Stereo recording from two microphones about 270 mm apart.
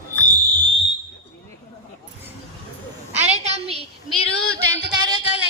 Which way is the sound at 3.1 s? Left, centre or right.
Right.